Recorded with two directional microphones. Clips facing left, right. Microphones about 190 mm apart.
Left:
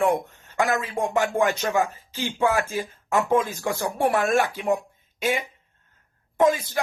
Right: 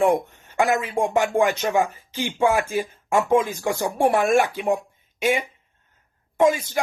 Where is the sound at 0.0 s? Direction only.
20° right (ahead or behind).